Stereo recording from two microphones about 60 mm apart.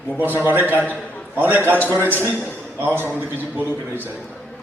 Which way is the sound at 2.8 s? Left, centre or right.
Right.